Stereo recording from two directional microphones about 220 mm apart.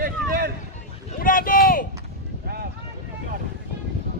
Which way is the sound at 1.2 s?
40° left (ahead or behind).